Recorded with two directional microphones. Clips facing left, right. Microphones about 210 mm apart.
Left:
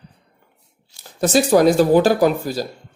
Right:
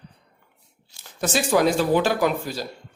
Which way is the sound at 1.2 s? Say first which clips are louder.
Left 6 dB; 40° left (ahead or behind).